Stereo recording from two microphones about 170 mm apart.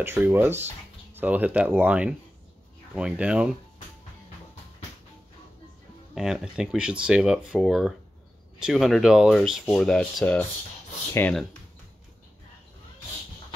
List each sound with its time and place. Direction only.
0.0 s speech: 15° right (ahead or behind)
6.1 s speech: 5° right (ahead or behind)